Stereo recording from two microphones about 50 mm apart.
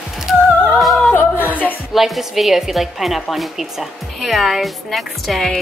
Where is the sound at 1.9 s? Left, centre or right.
Centre.